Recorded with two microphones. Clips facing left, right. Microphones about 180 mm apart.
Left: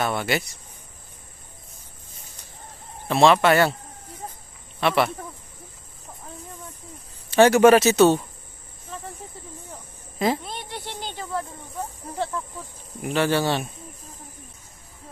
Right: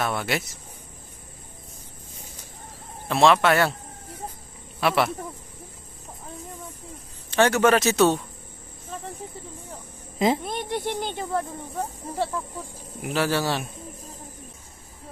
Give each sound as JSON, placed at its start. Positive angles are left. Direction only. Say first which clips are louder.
{"t": 0.0, "sound": "speech", "louder": "left 2 dB", "side_deg": 0}
{"t": 3.1, "sound": "speech", "louder": "left 2 dB", "side_deg": 0}
{"t": 4.7, "sound": "speech", "louder": "left 1 dB", "side_deg": 0}
{"t": 7.2, "sound": "a man's voice", "louder": "left 5 dB", "side_deg": 10}
{"t": 10.1, "sound": "speech", "louder": "right 1 dB", "side_deg": -20}
{"t": 10.4, "sound": "speech", "louder": "right 7 dB", "side_deg": -50}
{"t": 13.0, "sound": "speech", "louder": "left 2 dB", "side_deg": 0}